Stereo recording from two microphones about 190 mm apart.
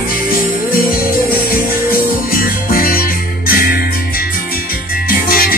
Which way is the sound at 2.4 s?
50° left (ahead or behind).